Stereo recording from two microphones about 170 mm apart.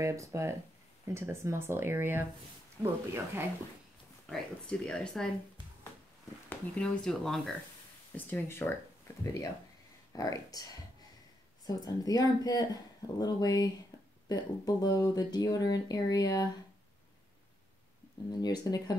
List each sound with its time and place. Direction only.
0.0 s speech: 15° right (ahead or behind)
4.3 s speech: 5° left (ahead or behind)
6.5 s speech: 5° left (ahead or behind); by 16.4 s 20° left (ahead or behind)
18.4 s speech: 25° left (ahead or behind)